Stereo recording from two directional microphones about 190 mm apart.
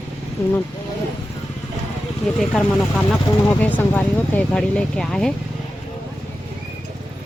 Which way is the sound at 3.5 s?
10° left (ahead or behind).